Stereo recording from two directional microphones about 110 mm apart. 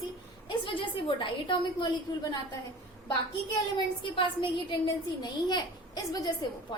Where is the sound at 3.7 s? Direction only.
50° left (ahead or behind).